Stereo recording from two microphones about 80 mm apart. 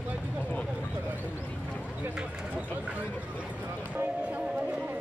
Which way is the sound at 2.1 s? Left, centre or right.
Centre.